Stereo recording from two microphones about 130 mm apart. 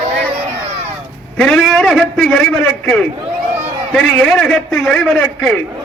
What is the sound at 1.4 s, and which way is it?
A man's voice, 5° left (ahead or behind).